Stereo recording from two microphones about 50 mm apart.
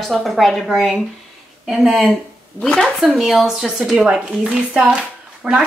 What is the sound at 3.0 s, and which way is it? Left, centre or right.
Speech, centre.